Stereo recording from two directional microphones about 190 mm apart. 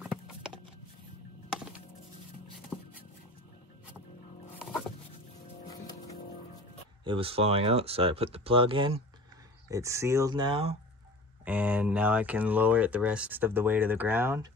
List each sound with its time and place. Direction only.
0.0 s a sound: 5° right (ahead or behind)
1.5 s music: 5° right (ahead or behind)
2.7 s a sound: centre (ahead or behind)
4.6 s dog: centre (ahead or behind)
7.1 s speech: 30° right (ahead or behind)
9.7 s speech: 15° right (ahead or behind)
11.4 s speech: 10° right (ahead or behind)